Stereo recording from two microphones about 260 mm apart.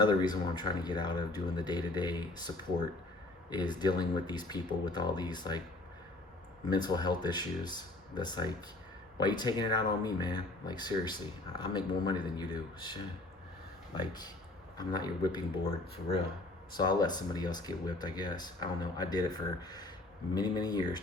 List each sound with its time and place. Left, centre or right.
0.0 s speech: centre
3.8 s speech: centre
6.7 s speech: centre
14.1 s speech: centre
16.7 s speech: centre